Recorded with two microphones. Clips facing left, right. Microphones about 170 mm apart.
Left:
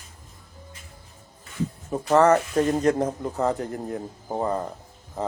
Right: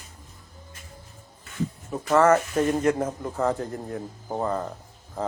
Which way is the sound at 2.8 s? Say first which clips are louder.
Left 2 dB; 35° left (ahead or behind).